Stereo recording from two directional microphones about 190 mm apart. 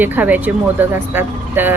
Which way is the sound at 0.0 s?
10° right (ahead or behind).